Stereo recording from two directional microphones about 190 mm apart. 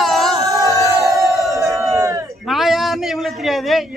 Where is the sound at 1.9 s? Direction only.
15° right (ahead or behind).